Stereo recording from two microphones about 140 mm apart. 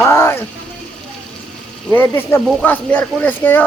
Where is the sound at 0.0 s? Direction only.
20° left (ahead or behind).